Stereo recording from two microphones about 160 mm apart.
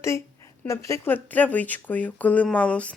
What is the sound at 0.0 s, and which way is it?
Speech, 15° left (ahead or behind).